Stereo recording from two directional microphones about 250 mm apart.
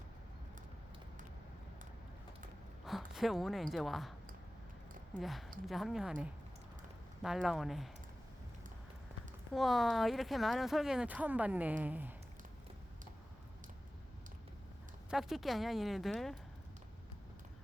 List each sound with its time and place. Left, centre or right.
2.8 s speech: centre
5.1 s speech: centre
9.5 s speech: centre
15.1 s speech: centre